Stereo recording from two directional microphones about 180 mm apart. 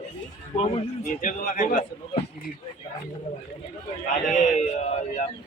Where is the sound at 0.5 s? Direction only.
40° left (ahead or behind).